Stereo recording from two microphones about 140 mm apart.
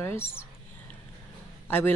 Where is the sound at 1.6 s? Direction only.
15° left (ahead or behind).